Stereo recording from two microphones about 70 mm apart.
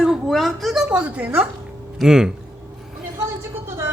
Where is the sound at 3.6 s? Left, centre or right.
Right.